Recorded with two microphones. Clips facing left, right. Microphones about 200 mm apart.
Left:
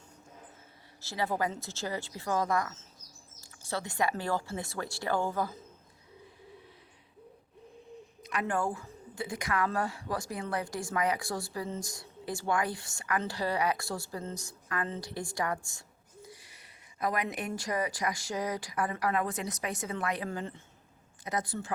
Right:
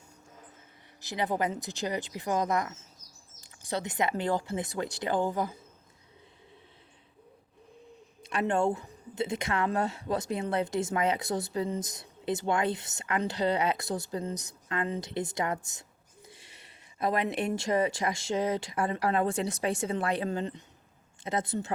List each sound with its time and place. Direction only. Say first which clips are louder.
1.0 s speech: right 2 dB; 20° right (ahead or behind)
8.2 s speech: right 4 dB; 30° right (ahead or behind)